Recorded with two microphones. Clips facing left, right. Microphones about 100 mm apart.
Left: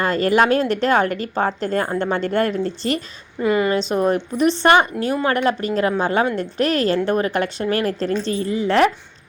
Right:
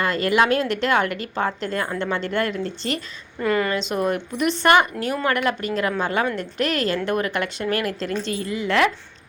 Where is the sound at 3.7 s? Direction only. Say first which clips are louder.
Left 4 dB; 35° left (ahead or behind).